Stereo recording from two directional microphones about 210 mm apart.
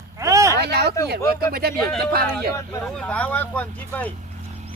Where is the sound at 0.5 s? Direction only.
50° right (ahead or behind).